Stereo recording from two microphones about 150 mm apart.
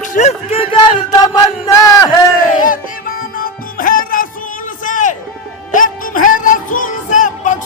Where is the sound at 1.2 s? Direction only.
25° left (ahead or behind).